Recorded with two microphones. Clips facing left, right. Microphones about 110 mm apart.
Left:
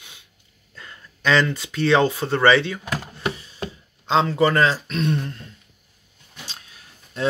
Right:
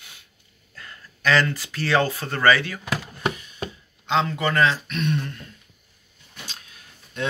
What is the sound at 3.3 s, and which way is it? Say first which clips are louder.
Chopping: left 2 dB; 30° left (ahead or behind).